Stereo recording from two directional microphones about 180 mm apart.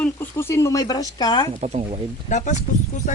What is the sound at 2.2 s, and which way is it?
Speech, 40° left (ahead or behind).